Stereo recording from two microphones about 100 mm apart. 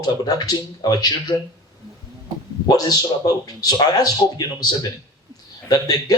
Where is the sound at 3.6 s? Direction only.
40° left (ahead or behind).